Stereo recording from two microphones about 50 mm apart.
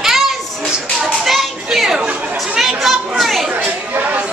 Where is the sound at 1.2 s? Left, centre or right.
Centre.